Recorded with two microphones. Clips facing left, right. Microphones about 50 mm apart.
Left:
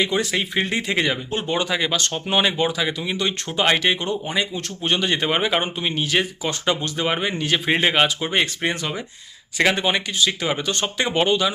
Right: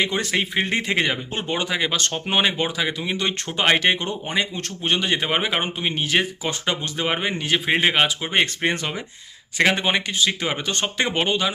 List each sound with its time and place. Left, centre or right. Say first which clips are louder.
0.2 s speech: even; right
1.5 s speech: left 1 dB; centre
4.8 s a man's voice: left 1 dB; right
5.9 s a man's voice: right 1 dB; right; by 8.3 s centre
8.3 s speech: right 1 dB; right